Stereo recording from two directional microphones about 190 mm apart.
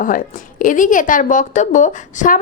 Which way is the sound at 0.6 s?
45° left (ahead or behind).